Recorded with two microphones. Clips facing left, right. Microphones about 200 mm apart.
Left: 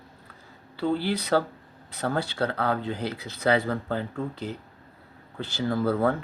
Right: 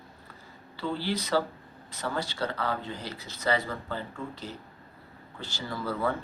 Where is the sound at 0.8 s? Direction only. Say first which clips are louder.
Left 5 dB; 60° left (ahead or behind).